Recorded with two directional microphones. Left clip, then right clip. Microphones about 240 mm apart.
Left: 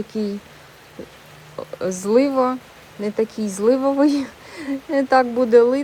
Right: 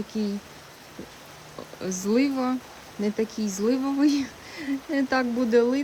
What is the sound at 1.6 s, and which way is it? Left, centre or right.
Speech, centre.